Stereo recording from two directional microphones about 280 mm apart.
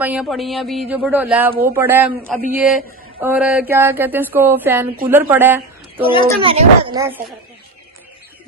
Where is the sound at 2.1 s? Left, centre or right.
Right.